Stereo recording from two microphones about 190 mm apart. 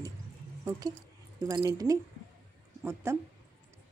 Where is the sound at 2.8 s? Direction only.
10° right (ahead or behind).